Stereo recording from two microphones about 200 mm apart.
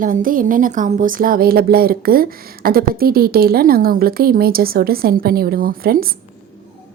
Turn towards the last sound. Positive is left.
turn(degrees=-45)  # may be behind; listen again after turning